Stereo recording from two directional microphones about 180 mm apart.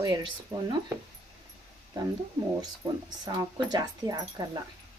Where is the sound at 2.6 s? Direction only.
20° right (ahead or behind).